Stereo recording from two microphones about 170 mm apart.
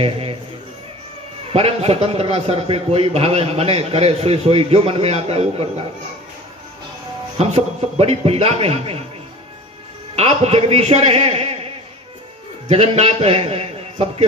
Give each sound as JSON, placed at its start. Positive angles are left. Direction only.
{"t": 0.0, "sound": "a man's voice", "side_deg": -35}
{"t": 1.5, "sound": "a man's voice", "side_deg": -35}
{"t": 7.3, "sound": "a man's voice", "side_deg": -40}
{"t": 10.2, "sound": "a man's voice", "side_deg": -40}